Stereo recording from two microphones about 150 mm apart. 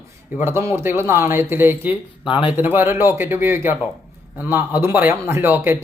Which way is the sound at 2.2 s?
35° left (ahead or behind).